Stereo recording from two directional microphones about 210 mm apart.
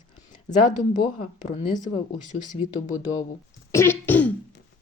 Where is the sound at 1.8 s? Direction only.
35° left (ahead or behind).